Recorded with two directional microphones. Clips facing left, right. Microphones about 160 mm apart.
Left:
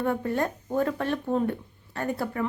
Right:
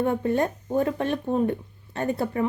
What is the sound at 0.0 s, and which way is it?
Speech, 20° right (ahead or behind).